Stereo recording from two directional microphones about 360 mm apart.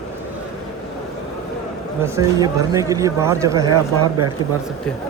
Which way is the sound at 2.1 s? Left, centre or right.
Centre.